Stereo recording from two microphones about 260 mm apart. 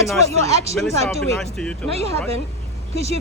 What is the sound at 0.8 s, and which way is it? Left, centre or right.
Speech, centre.